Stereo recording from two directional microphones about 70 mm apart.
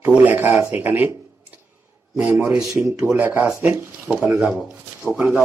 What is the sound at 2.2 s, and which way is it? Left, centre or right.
A man's voice, centre.